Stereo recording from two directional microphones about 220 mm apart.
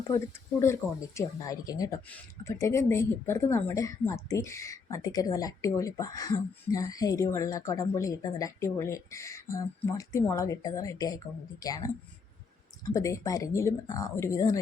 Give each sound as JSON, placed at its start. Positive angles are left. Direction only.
{"t": 0.6, "sound": "speech", "side_deg": 15}